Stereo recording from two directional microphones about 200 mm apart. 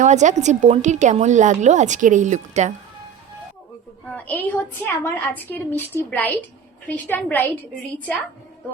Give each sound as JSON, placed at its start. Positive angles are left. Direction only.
{"t": 0.0, "sound": "a woman's voice", "side_deg": -35}
{"t": 4.1, "sound": "a woman's voice", "side_deg": 10}